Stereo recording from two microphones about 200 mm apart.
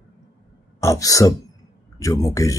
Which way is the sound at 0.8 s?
15° left (ahead or behind).